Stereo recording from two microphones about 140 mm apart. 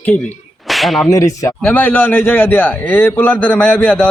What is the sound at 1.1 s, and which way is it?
Speech, 25° left (ahead or behind).